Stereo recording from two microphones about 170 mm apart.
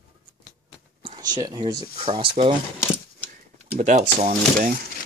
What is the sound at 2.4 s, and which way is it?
Coin, 35° right (ahead or behind).